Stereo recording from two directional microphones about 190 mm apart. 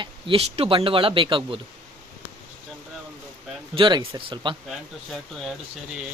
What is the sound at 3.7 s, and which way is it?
Speech, 25° right (ahead or behind).